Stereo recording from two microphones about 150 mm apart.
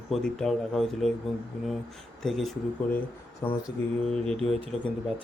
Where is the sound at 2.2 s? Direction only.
Centre (ahead or behind).